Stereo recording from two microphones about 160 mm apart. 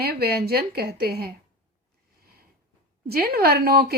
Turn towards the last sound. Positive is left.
turn(degrees=-75)  # may be behind; listen again after turning